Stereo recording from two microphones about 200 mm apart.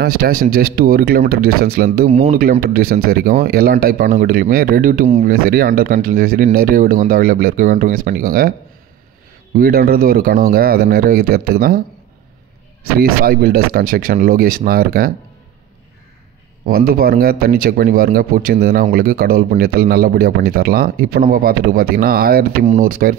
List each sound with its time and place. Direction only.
0.0 s speech: 50° right (ahead or behind)
9.6 s speech: 50° right (ahead or behind)
13.0 s speech: 45° right (ahead or behind)
16.6 s speech: 45° right (ahead or behind)